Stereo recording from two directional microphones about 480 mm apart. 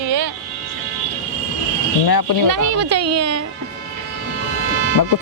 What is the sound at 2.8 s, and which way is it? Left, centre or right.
Speech, right.